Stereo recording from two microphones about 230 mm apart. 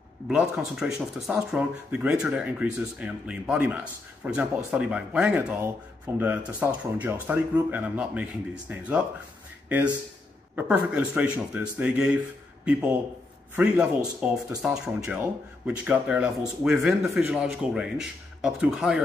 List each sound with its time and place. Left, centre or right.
0.3 s speech: centre
13.6 s speech: centre